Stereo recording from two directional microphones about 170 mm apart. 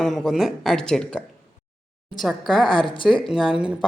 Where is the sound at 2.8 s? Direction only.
30° left (ahead or behind).